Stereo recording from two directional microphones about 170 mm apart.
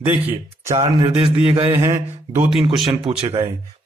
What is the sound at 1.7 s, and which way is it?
Speech, 15° right (ahead or behind).